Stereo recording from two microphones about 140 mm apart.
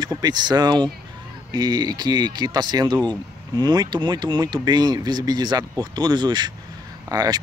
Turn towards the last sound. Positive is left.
turn(degrees=-25)  # may be behind; listen again after turning